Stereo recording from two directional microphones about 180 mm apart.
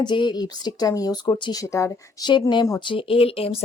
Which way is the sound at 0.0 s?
25° left (ahead or behind).